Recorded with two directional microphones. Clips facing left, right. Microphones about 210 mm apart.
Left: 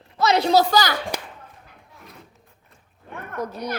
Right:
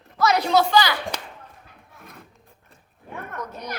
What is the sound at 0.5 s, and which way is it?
Speech, 40° left (ahead or behind).